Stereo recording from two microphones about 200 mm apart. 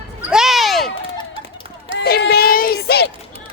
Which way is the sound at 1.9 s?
55° left (ahead or behind).